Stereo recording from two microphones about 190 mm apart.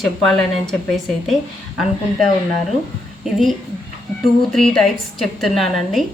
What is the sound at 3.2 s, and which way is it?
A woman's voice, centre (ahead or behind).